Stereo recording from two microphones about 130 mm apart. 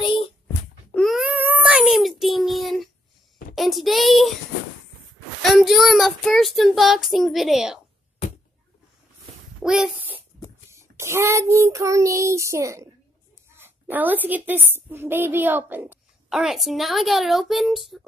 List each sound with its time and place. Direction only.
0.9 s wail: centre (ahead or behind)
1.3 s child singing: 15° right (ahead or behind)
5.4 s child singing: centre (ahead or behind)
9.6 s a sound: 5° right (ahead or behind)
10.7 s child singing: 20° right (ahead or behind)
13.6 s a woman's voice: 15° right (ahead or behind)
16.3 s child singing: 5° right (ahead or behind)